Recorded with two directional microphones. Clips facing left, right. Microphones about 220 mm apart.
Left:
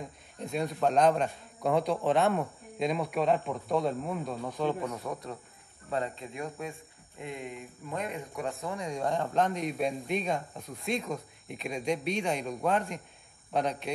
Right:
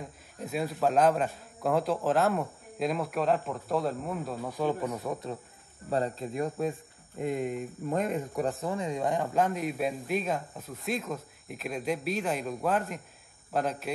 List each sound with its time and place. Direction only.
0.0 s a man's voice: 5° right (ahead or behind)
5.9 s speech: 35° right (ahead or behind)
8.5 s a man's voice: centre (ahead or behind)